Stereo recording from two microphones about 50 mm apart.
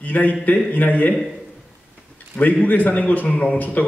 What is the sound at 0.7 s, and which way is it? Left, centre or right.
Speech, left.